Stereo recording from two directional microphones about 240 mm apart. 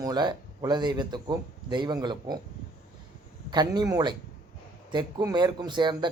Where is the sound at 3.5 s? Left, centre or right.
Centre.